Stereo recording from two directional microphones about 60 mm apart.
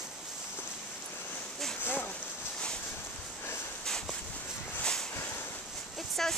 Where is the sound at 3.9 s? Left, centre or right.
Centre.